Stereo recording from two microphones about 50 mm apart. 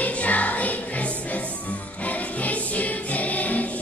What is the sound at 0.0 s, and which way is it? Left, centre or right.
Music, left.